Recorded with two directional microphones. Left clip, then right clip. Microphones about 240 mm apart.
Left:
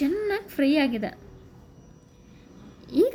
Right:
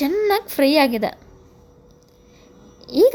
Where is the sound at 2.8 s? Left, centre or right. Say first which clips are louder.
Right 7 dB; centre.